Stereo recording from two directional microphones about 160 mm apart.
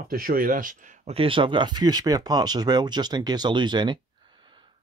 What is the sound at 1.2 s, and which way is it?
Speech, 35° right (ahead or behind).